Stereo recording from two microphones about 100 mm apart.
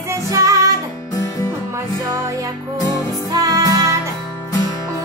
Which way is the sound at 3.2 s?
35° right (ahead or behind).